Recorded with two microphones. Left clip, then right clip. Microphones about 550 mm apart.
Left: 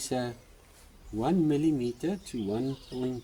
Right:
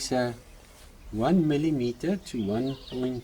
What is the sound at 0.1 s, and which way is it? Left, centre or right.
Speech, left.